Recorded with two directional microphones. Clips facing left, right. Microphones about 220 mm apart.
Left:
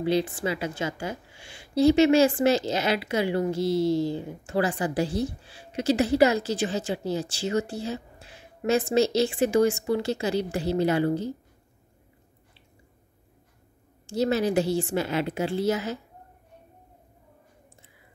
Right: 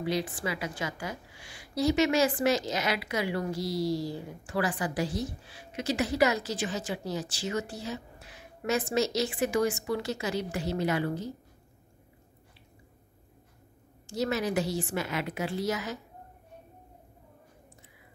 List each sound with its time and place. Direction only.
0.0 s a woman's voice: 25° left (ahead or behind)
14.0 s a woman's voice: 30° left (ahead or behind)